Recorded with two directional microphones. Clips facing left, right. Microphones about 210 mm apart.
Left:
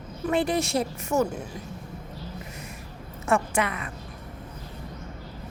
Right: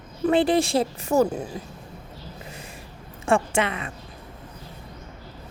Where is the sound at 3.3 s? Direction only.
25° right (ahead or behind).